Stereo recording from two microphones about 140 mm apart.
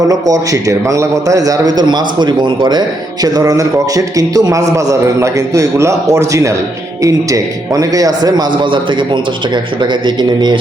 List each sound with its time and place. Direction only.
0.1 s a man's voice: 25° right (ahead or behind)
10.2 s a man's voice: 30° right (ahead or behind)